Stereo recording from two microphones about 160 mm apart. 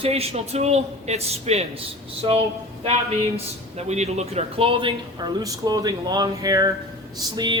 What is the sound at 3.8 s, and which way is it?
A man's voice, 45° right (ahead or behind).